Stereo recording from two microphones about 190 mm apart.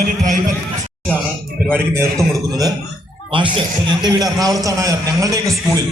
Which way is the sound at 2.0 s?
15° right (ahead or behind).